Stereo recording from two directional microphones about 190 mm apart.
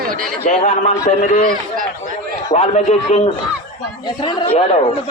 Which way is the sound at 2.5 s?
30° left (ahead or behind).